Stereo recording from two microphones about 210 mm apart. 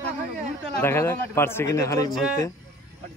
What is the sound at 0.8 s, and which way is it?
Speech, 10° left (ahead or behind).